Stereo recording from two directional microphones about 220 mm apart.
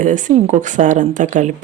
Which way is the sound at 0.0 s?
35° right (ahead or behind).